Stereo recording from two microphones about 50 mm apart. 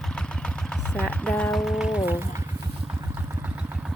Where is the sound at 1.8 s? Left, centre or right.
Centre.